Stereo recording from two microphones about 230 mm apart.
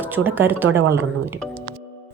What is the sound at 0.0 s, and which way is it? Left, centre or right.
A woman's voice, centre.